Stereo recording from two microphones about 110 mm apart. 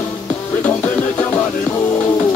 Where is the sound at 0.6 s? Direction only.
15° left (ahead or behind).